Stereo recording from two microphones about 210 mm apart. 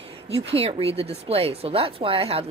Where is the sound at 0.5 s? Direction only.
30° right (ahead or behind).